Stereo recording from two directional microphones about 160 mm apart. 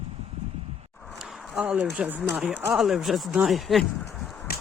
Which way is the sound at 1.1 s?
5° right (ahead or behind).